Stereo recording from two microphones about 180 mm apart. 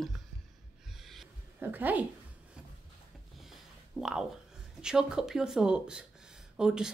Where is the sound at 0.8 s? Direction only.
Centre (ahead or behind).